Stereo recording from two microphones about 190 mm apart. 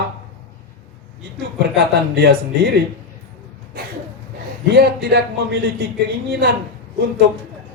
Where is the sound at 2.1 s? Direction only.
55° right (ahead or behind).